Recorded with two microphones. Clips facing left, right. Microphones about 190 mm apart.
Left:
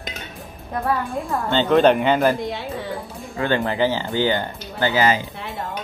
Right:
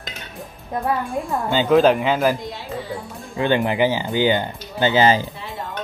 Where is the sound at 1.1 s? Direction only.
Centre (ahead or behind).